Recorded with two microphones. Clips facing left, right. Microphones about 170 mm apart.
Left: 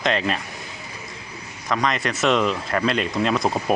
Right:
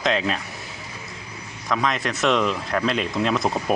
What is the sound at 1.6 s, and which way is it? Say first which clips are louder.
Speech: left 1 dB; centre (ahead or behind).